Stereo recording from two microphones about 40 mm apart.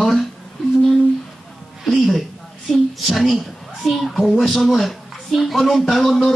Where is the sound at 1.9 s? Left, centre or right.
Centre.